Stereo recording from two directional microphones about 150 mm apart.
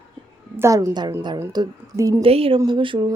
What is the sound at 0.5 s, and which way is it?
A woman's voice, 20° right (ahead or behind).